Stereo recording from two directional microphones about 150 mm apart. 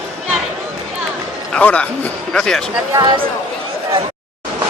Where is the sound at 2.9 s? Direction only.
30° right (ahead or behind).